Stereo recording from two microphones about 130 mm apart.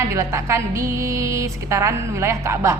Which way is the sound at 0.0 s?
25° right (ahead or behind).